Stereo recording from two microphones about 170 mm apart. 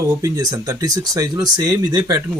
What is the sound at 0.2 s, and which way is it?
Speech, 20° right (ahead or behind).